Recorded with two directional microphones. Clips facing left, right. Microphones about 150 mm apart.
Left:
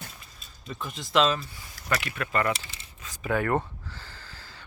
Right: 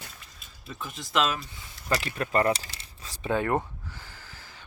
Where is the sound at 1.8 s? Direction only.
30° right (ahead or behind).